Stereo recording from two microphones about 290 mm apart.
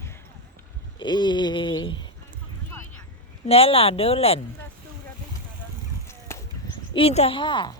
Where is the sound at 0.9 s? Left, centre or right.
Centre.